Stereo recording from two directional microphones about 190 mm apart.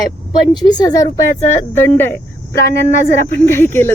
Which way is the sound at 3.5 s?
10° left (ahead or behind).